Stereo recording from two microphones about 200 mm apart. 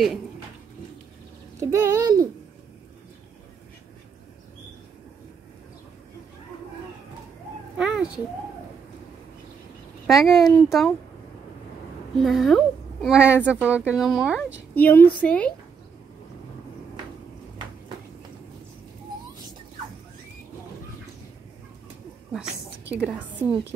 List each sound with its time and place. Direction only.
1.6 s speech: 15° right (ahead or behind)
7.7 s a sound: 5° right (ahead or behind)
10.0 s speech: centre (ahead or behind)
12.2 s speech: centre (ahead or behind)
14.7 s a woman's voice: 10° left (ahead or behind)
22.3 s a woman's voice: 5° right (ahead or behind)